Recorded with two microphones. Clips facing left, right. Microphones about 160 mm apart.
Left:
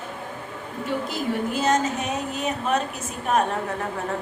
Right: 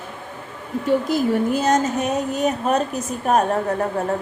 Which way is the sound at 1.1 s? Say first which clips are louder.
Right 7 dB; 40° right (ahead or behind).